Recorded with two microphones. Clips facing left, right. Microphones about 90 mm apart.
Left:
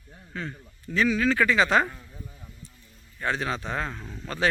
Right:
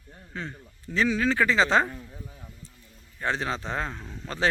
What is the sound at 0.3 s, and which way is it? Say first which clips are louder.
Speech: left 1 dB; 25° right (ahead or behind).